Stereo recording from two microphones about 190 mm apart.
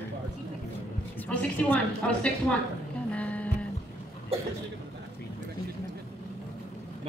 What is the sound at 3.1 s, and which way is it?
Music, 5° left (ahead or behind).